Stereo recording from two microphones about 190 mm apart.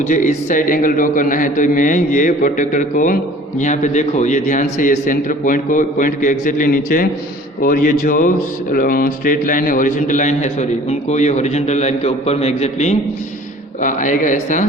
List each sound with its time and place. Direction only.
0.1 s a man's voice: 45° left (ahead or behind)